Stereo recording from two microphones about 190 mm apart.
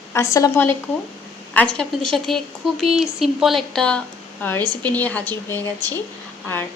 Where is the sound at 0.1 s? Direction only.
15° left (ahead or behind).